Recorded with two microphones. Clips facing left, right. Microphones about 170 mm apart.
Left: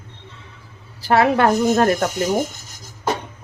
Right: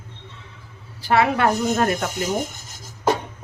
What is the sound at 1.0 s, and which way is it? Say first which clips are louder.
Speech: left 2 dB; 40° left (ahead or behind).